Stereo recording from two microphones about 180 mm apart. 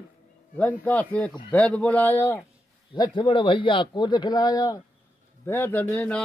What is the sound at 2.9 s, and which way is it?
A man's voice, 25° left (ahead or behind).